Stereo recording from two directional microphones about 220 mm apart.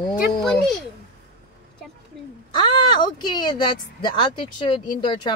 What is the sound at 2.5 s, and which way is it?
Speech, 20° left (ahead or behind).